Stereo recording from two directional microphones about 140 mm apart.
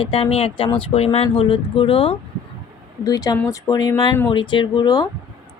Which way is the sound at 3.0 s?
25° left (ahead or behind).